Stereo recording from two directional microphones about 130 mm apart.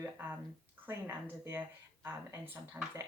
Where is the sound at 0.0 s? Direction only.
15° right (ahead or behind).